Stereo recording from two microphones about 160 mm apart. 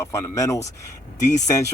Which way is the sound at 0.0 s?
20° left (ahead or behind).